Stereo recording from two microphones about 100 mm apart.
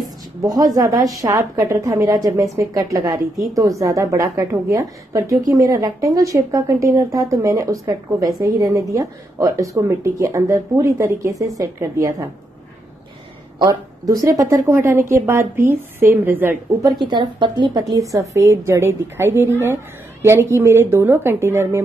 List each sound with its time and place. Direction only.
0.4 s a woman's voice: 35° right (ahead or behind)
13.6 s a woman's voice: 35° right (ahead or behind); by 16.5 s 20° right (ahead or behind)
17.0 s a woman's voice: 50° right (ahead or behind)
17.9 s a woman's voice: 35° right (ahead or behind)